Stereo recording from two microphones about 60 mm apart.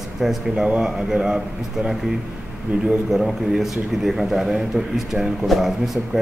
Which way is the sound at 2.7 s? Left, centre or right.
Right.